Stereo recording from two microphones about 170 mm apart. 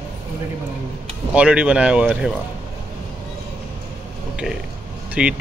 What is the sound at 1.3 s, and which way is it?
Speech, 5° right (ahead or behind).